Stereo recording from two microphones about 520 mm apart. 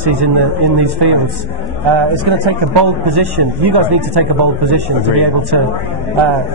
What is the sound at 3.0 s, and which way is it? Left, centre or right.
A man's voice, right.